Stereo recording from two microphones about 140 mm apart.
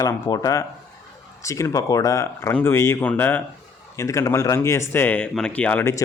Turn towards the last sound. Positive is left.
turn(degrees=15)  # may be behind; listen again after turning